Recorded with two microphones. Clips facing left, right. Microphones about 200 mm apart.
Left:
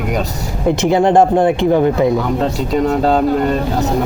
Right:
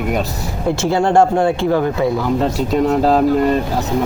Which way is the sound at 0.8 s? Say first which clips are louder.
Left 2 dB; 20° left (ahead or behind).